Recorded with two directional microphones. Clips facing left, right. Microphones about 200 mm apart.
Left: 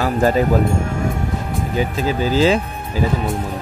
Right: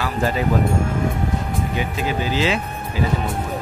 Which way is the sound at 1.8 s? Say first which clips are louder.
Left 6 dB; 40° left (ahead or behind).